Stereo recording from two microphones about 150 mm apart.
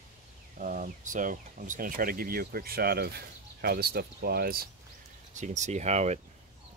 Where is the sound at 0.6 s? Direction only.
60° right (ahead or behind); by 4.7 s 85° right.